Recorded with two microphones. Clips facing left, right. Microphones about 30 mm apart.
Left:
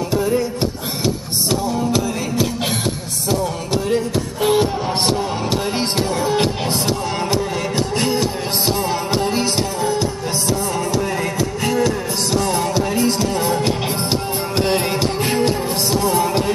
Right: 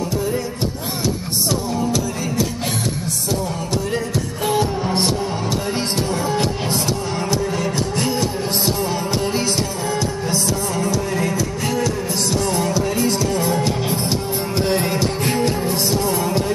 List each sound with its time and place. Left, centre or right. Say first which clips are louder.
1.5 s music: left 3 dB; left
4.5 s music: left 2 dB; left
11.6 s music: left 5 dB; left
14.7 s music: even; left